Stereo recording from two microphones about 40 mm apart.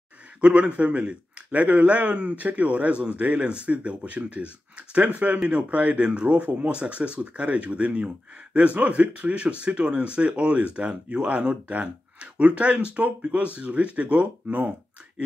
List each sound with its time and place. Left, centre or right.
0.4 s a man's voice: right